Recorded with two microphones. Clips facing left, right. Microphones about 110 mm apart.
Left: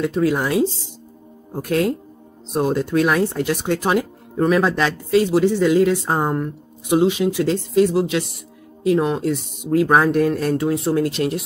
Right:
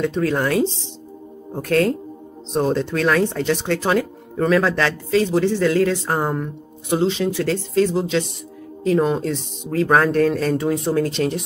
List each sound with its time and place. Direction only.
0.0 s speech: 5° left (ahead or behind)
10.5 s speech: centre (ahead or behind)